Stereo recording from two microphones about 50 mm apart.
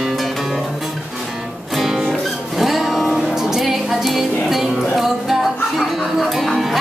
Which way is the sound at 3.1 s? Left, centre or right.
Centre.